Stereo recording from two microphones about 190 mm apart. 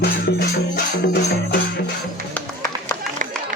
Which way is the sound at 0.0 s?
55° left (ahead or behind).